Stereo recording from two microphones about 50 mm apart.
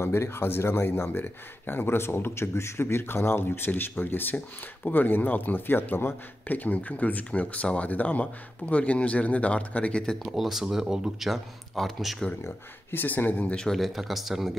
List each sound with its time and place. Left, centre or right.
0.0 s speech: left
6.4 s speech: left
10.1 s speech: centre
11.2 s a man's voice: centre
12.9 s speech: left
13.7 s a man's voice: centre